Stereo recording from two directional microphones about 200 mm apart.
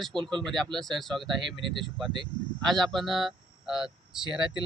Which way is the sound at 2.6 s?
Centre (ahead or behind).